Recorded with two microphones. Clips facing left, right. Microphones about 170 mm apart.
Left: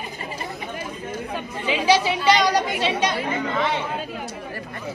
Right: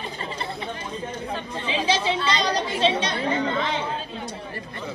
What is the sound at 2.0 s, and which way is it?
Speech, 25° right (ahead or behind).